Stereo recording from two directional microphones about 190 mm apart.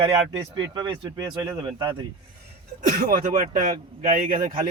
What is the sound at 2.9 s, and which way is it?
Speech, 50° right (ahead or behind).